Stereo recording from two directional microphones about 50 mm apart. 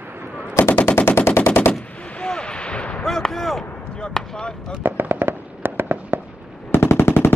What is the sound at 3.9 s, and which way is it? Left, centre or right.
Basketball bounce, centre.